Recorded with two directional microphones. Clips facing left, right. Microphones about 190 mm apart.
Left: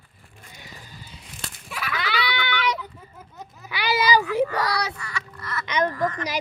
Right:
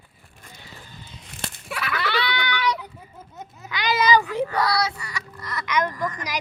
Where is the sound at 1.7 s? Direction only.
65° right (ahead or behind).